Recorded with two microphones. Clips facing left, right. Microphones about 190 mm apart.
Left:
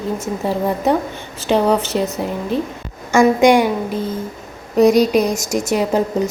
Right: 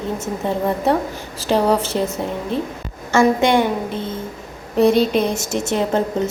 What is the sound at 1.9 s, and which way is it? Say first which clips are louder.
Speech: left 2 dB; 10° left (ahead or behind).